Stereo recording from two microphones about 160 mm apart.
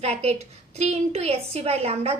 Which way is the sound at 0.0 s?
40° right (ahead or behind).